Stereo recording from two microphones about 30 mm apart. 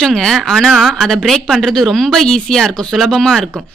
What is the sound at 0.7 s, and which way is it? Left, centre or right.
Speech, centre.